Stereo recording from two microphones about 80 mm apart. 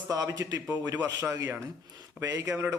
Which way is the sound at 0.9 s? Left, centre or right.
Right.